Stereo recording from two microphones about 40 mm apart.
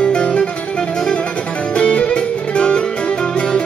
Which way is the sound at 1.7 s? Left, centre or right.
Left.